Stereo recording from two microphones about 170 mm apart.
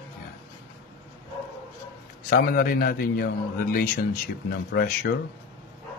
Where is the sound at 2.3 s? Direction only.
55° left (ahead or behind).